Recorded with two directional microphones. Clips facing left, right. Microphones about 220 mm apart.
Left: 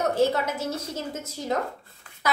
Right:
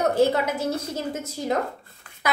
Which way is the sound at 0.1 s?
15° right (ahead or behind).